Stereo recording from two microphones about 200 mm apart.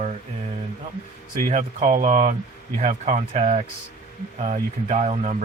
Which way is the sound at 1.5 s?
40° right (ahead or behind).